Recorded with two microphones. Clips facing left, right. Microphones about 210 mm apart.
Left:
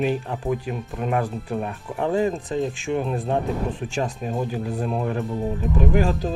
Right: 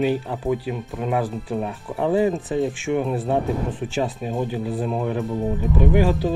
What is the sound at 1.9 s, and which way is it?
Speech, 15° right (ahead or behind).